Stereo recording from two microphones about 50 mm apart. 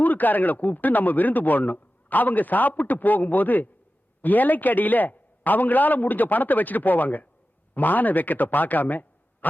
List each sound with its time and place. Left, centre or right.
0.0 s speech: left